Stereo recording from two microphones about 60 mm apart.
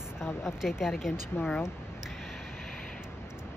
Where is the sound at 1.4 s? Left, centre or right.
Left.